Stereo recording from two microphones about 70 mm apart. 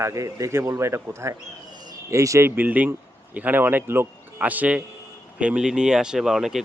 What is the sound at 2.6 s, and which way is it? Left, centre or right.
Speech, right.